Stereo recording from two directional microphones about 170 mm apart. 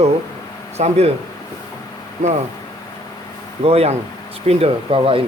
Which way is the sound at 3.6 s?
35° right (ahead or behind).